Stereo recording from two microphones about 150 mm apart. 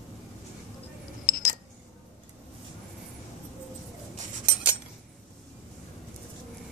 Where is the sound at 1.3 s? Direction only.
70° left (ahead or behind).